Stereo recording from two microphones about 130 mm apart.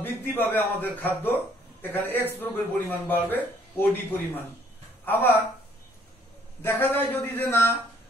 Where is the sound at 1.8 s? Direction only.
15° left (ahead or behind).